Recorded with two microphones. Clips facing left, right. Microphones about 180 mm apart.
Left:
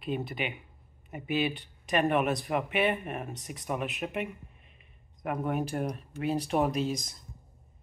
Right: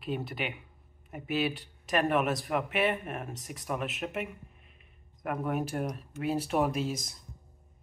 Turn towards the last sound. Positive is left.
turn(degrees=-10)  # may be behind; listen again after turning